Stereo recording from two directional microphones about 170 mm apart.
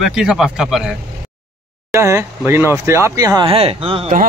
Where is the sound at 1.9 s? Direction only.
15° right (ahead or behind); by 4.1 s 35° right (ahead or behind).